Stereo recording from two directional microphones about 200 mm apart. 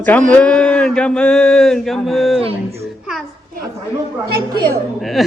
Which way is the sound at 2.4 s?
30° right (ahead or behind).